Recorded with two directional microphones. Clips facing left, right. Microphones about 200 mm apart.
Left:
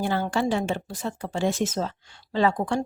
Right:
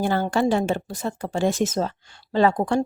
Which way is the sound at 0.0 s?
50° right (ahead or behind).